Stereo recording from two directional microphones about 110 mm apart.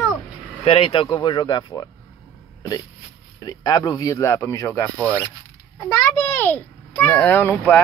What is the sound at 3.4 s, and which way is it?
A child's voice, 35° left (ahead or behind).